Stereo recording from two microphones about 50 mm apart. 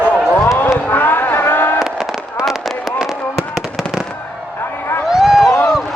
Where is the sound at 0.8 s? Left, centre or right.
Left.